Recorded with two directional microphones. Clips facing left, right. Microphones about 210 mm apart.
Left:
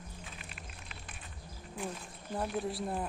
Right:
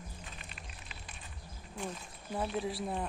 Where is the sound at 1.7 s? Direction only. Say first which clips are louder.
Left 1 dB; centre (ahead or behind).